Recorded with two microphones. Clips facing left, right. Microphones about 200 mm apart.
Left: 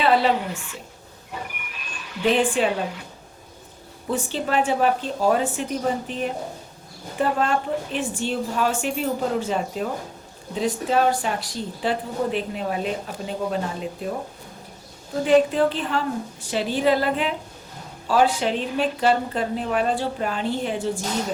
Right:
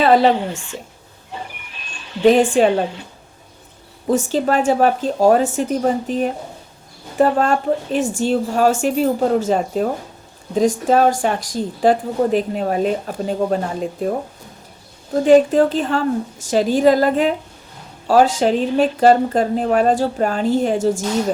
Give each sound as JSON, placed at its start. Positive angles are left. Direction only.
{"t": 0.0, "sound": "speech", "side_deg": -40}
{"t": 1.3, "sound": "a sound", "side_deg": -30}
{"t": 2.6, "sound": "a woman's voice", "side_deg": -30}
{"t": 4.0, "sound": "a woman's voice", "side_deg": -40}
{"t": 15.1, "sound": "a woman's voice", "side_deg": -40}